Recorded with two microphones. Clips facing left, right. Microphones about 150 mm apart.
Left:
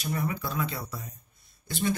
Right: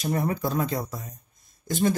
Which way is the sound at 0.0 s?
45° right (ahead or behind).